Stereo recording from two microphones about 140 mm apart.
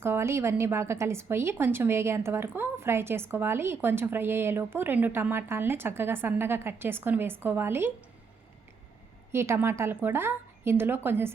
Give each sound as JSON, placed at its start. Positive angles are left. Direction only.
{"t": 0.0, "sound": "a woman's voice", "side_deg": -20}
{"t": 9.3, "sound": "a woman's voice", "side_deg": -20}